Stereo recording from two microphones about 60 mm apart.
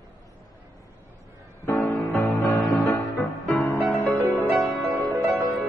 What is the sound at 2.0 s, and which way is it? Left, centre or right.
Music, left.